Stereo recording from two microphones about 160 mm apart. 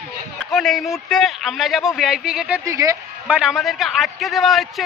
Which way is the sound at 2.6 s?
20° right (ahead or behind).